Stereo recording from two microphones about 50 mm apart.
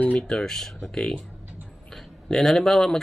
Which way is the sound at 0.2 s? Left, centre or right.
Centre.